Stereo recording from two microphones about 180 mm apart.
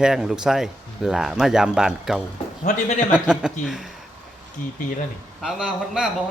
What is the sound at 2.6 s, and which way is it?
Speech, 40° left (ahead or behind).